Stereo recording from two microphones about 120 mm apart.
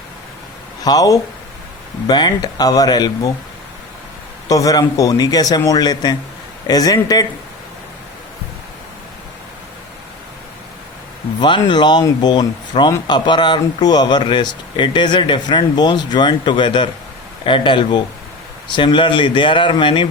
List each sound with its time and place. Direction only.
0.9 s speech: 30° left (ahead or behind)
4.4 s speech: 30° left (ahead or behind)
11.3 s speech: 40° left (ahead or behind)